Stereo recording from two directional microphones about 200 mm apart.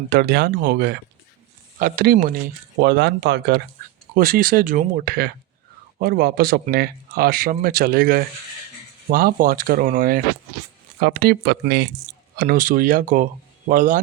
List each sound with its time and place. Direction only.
0.1 s speech: 50° right (ahead or behind)
2.8 s speech: 55° right (ahead or behind)
4.1 s speech: 45° right (ahead or behind)